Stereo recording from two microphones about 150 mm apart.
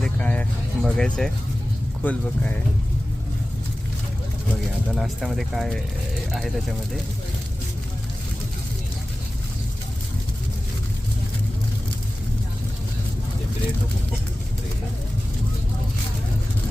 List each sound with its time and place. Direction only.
0.0 s a sound: 10° left (ahead or behind)
0.8 s speech: 5° left (ahead or behind)
4.9 s speech: centre (ahead or behind)